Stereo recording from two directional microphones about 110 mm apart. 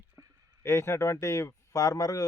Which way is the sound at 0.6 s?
25° left (ahead or behind).